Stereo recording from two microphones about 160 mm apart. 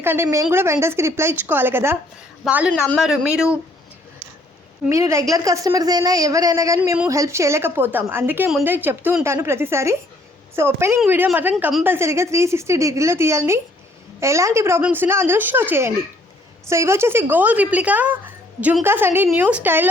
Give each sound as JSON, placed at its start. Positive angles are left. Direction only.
{"t": 0.0, "sound": "a woman's voice", "side_deg": -15}
{"t": 4.9, "sound": "a woman's voice", "side_deg": -20}